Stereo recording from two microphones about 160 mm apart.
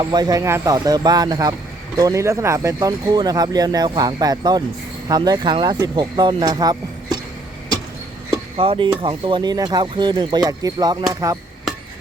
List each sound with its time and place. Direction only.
0.0 s speech: 25° right (ahead or behind)
8.5 s speech: 35° right (ahead or behind)